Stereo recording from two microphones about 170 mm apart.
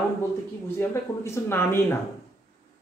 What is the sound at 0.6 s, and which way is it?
Speech, 15° left (ahead or behind).